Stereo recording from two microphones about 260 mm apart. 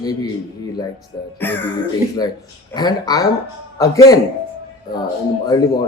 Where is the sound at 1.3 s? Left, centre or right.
Centre.